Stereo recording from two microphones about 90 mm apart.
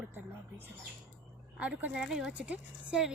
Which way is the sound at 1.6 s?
15° right (ahead or behind).